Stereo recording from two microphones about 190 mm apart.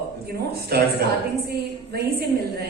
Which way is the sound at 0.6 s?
55° right (ahead or behind).